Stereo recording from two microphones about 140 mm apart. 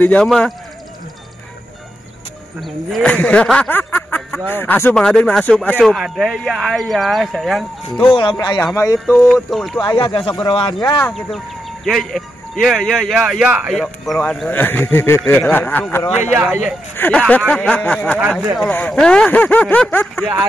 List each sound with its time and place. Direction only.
0.0 s speech: 10° left (ahead or behind)
2.6 s speech: 5° left (ahead or behind)
8.1 s speech: 35° left (ahead or behind)
9.0 s speech: 5° left (ahead or behind)
9.8 s speech: 35° left (ahead or behind)
11.1 s speech: centre (ahead or behind)
14.5 s speech: 15° left (ahead or behind)